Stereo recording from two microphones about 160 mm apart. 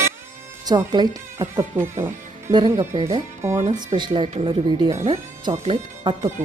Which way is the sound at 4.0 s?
30° right (ahead or behind).